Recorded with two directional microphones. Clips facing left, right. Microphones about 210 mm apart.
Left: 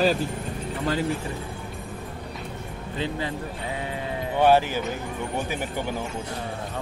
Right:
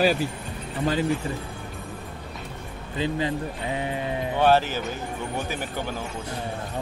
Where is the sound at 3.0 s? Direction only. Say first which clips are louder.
Right 3 dB; 15° right (ahead or behind).